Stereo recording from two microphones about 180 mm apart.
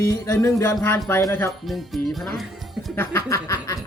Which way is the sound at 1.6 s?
Centre (ahead or behind).